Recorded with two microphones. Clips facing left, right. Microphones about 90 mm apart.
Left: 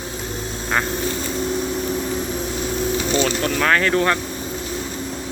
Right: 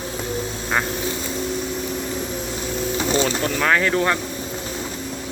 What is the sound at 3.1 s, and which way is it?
Speech, 25° right (ahead or behind).